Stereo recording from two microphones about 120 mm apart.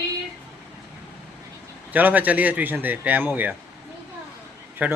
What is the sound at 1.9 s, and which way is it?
Speech, 15° right (ahead or behind).